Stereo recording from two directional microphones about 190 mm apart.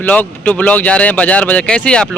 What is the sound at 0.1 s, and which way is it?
Speech, 10° left (ahead or behind).